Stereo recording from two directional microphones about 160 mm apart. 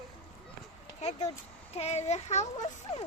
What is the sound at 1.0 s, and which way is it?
Speech, 40° left (ahead or behind).